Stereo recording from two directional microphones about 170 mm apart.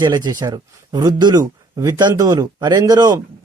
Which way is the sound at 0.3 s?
25° right (ahead or behind).